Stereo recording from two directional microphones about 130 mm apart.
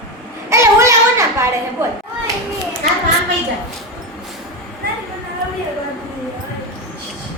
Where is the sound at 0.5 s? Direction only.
20° right (ahead or behind).